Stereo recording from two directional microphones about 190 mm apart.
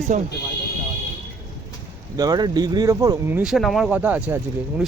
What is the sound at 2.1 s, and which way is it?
Speech, 20° right (ahead or behind).